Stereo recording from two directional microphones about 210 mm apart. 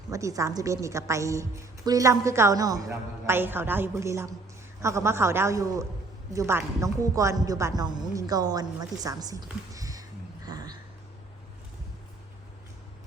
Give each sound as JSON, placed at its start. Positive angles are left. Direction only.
{"t": 0.1, "sound": "a woman's voice", "side_deg": -15}